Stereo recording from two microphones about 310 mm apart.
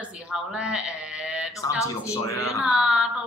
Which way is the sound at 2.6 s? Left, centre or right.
Centre.